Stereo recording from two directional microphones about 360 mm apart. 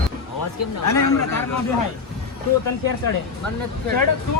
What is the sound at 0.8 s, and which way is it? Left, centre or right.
Speech, left.